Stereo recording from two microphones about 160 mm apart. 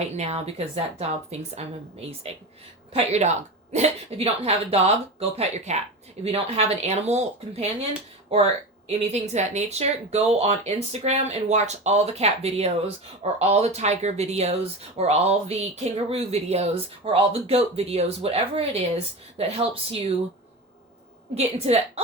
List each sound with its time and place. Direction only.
0.2 s speech: 40° right (ahead or behind)
2.9 s speech: 40° right (ahead or behind)
21.3 s speech: 40° right (ahead or behind)